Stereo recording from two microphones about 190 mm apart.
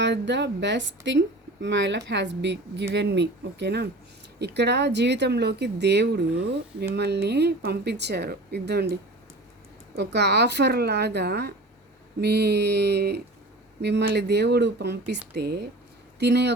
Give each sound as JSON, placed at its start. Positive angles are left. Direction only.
{"t": 0.0, "sound": "a woman's voice", "side_deg": -65}